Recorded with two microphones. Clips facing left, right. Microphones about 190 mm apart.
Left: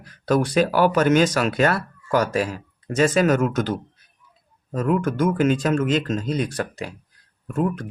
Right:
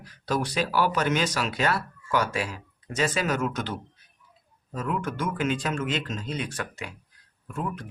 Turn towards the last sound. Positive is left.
turn(degrees=50)  # may be behind; listen again after turning